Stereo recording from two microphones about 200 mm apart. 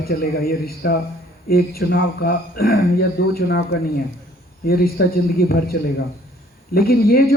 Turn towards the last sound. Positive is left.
turn(degrees=50)  # may be behind; listen again after turning